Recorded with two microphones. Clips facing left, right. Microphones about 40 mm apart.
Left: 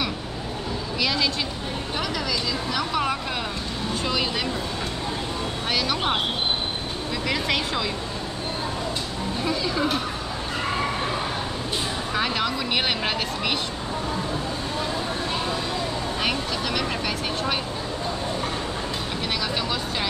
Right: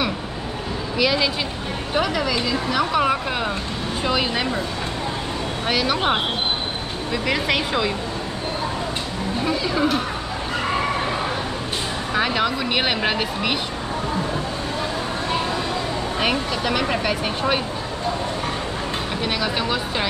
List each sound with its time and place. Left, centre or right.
0.9 s speech: centre
5.7 s speech: centre
5.9 s speech: right
7.2 s speech: centre
9.4 s speech: centre
12.1 s speech: centre
16.2 s speech: centre
19.2 s speech: centre